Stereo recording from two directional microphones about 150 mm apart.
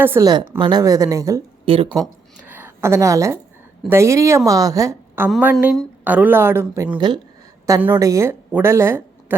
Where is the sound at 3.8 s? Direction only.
20° right (ahead or behind).